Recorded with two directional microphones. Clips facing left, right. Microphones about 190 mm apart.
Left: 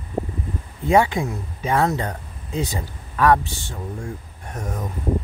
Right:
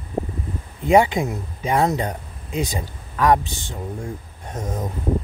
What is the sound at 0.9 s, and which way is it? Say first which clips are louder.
Speech: right 2 dB; 15° right (ahead or behind).